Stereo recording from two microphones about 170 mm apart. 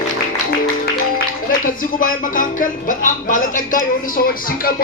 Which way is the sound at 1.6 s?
55° left (ahead or behind).